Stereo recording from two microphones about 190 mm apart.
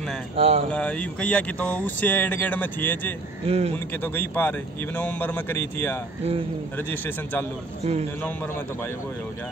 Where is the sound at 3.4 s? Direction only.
35° right (ahead or behind).